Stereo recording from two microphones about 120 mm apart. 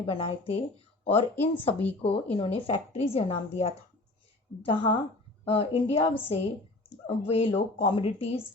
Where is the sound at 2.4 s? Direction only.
50° left (ahead or behind).